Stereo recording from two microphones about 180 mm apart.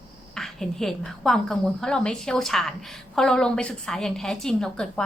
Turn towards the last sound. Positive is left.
turn(degrees=5)  # may be behind; listen again after turning